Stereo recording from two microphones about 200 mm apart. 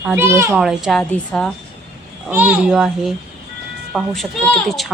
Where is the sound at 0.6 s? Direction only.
Centre (ahead or behind).